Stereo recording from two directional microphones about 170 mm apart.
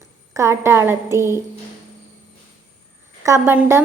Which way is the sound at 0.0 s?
15° right (ahead or behind).